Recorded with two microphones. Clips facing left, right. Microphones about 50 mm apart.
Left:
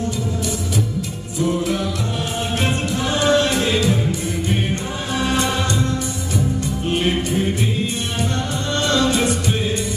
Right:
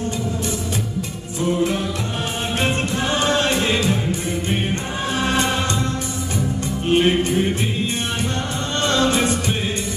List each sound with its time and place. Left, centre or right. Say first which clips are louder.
2.6 s music: right 2 dB; right
6.9 s music: right 4 dB; right
8.8 s music: even; right